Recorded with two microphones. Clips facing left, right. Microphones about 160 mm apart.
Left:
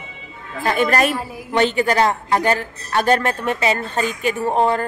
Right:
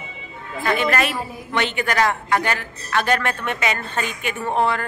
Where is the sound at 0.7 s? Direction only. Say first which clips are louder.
Left 3 dB; 40° left (ahead or behind).